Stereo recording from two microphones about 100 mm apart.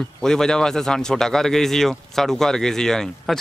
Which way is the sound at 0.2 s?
5° left (ahead or behind).